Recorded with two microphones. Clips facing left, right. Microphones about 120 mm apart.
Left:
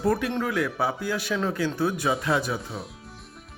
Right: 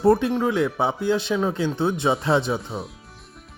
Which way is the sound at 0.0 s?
25° right (ahead or behind).